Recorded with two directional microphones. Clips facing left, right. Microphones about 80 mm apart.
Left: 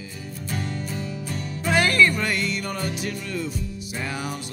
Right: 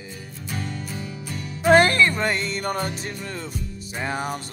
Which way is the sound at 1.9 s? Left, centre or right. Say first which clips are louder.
Even; right.